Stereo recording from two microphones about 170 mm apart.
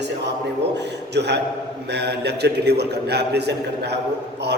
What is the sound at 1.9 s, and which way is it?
A man's voice, 80° right.